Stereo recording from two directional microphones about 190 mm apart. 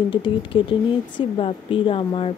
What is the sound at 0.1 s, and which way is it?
Speech, 25° left (ahead or behind).